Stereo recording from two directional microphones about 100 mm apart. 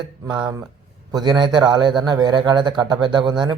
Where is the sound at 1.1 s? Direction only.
45° right (ahead or behind).